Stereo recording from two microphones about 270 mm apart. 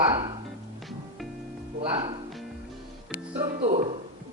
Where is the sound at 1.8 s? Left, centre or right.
Centre.